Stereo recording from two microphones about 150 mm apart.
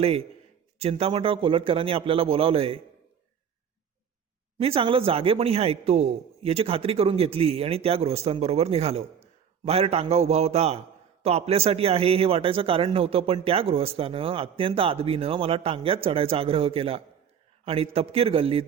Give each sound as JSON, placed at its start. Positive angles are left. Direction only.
{"t": 0.0, "sound": "a man's voice", "side_deg": -40}
{"t": 4.5, "sound": "a man's voice", "side_deg": -40}